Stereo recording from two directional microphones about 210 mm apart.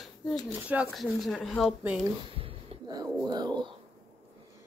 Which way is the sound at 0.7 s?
5° right (ahead or behind).